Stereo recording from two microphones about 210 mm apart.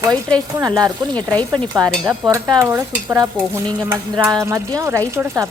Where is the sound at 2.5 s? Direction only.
15° right (ahead or behind).